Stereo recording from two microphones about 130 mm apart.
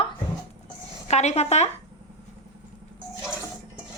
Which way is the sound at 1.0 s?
60° left (ahead or behind).